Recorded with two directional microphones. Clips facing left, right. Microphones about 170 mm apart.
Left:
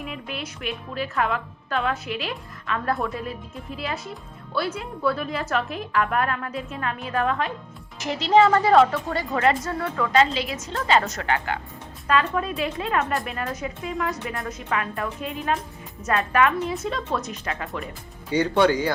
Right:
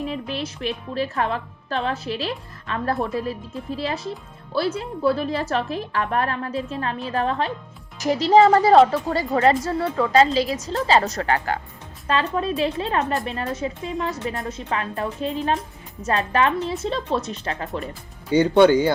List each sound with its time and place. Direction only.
0.0 s a woman's voice: 30° right (ahead or behind)